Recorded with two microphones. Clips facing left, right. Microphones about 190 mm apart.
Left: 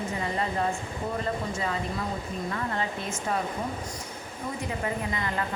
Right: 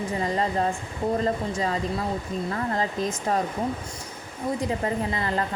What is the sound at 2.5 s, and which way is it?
Speech, 35° right (ahead or behind).